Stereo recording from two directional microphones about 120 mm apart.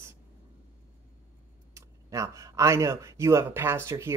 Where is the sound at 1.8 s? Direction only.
25° right (ahead or behind).